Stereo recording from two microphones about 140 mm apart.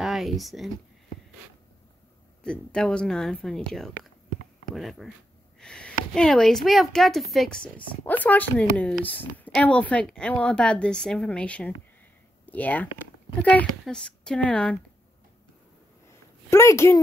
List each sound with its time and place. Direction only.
0.0 s speech: centre (ahead or behind)
2.4 s a woman's voice: 5° left (ahead or behind)
16.4 s a woman's voice: 20° left (ahead or behind)